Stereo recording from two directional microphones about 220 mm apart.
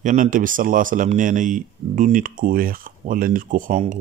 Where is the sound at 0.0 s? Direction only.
35° right (ahead or behind).